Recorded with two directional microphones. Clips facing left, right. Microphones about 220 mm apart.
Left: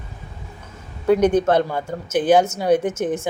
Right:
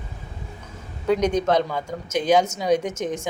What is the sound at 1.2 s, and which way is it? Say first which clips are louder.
Speech: left 6 dB; 55° left (ahead or behind).